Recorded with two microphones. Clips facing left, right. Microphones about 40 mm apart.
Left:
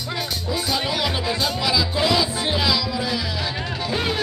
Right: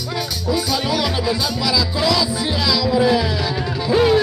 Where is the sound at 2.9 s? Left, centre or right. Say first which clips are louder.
Right 9 dB; centre.